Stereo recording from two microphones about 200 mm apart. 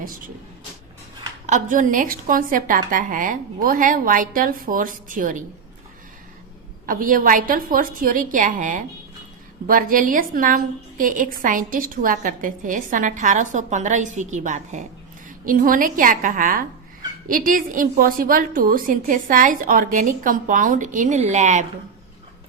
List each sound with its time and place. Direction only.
1.5 s a woman's voice: 40° right (ahead or behind)
6.8 s a woman's voice: 45° right (ahead or behind)